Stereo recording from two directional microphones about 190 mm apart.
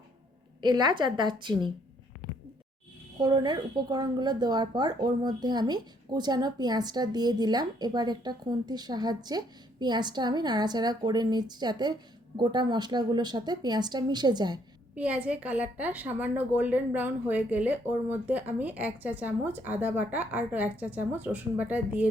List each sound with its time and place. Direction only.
0.6 s speech: 25° right (ahead or behind)
3.2 s speech: 20° right (ahead or behind)
14.9 s a woman's voice: 10° right (ahead or behind)